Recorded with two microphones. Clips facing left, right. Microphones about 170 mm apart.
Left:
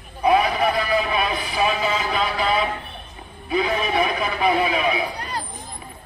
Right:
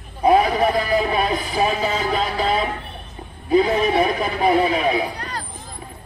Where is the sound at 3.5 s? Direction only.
35° right (ahead or behind).